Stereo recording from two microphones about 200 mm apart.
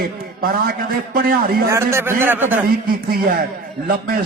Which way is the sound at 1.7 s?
10° right (ahead or behind).